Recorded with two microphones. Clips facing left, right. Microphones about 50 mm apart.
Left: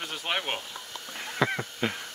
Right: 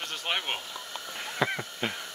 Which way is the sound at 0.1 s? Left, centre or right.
Centre.